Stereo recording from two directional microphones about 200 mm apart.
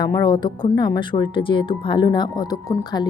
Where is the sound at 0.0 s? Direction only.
20° left (ahead or behind).